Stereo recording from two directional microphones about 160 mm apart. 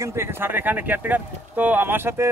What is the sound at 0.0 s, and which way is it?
A man's voice, 15° right (ahead or behind).